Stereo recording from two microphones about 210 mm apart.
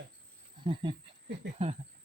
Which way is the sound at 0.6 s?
20° right (ahead or behind).